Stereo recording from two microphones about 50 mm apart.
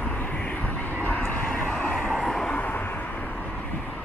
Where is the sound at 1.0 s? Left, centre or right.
Left.